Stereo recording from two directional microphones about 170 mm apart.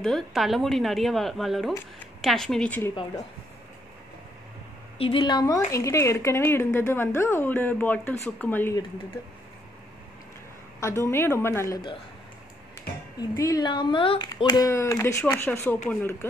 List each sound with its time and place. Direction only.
0.0 s speech: centre (ahead or behind)
4.9 s a woman's voice: 30° left (ahead or behind); by 8.7 s 10° left (ahead or behind)
10.8 s a woman's voice: 15° left (ahead or behind)
13.2 s a woman's voice: 20° left (ahead or behind)